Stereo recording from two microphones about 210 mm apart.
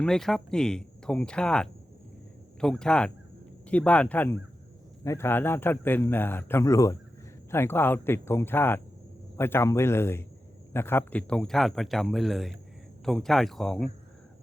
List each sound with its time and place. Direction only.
0.0 s a man's voice: centre (ahead or behind)